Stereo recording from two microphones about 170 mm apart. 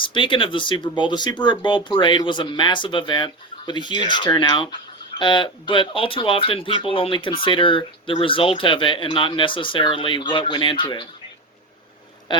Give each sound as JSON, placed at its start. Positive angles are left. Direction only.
{"t": 0.0, "sound": "speech", "side_deg": 30}
{"t": 12.3, "sound": "speech", "side_deg": 25}